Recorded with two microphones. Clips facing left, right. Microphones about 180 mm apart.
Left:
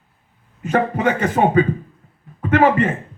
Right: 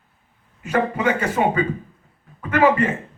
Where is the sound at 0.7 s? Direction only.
50° left (ahead or behind).